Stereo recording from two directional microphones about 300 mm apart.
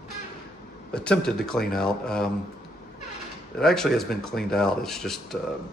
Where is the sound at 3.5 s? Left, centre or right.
Centre.